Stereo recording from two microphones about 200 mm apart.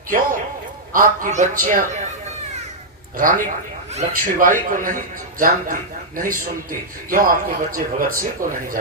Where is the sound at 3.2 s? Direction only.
45° right (ahead or behind).